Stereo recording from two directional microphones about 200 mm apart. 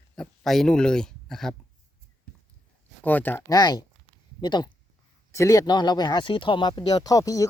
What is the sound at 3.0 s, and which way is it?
Speech, 10° left (ahead or behind).